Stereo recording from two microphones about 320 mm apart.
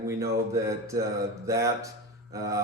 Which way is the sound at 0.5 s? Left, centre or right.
Centre.